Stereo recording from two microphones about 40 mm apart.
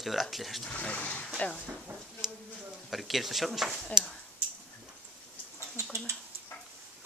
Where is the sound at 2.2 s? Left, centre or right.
Centre.